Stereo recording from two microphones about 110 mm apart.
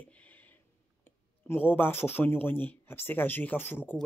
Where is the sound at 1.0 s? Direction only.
20° left (ahead or behind).